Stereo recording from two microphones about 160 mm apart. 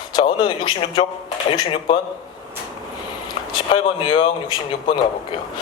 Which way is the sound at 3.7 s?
35° left (ahead or behind).